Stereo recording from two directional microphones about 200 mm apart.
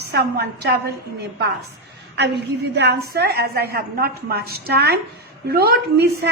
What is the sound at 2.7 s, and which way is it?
A woman's voice, 55° right (ahead or behind).